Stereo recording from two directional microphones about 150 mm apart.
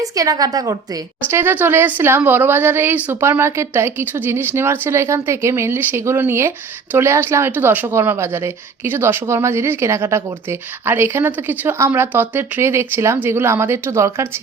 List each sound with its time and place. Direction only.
0.0 s a woman's voice: 25° right (ahead or behind)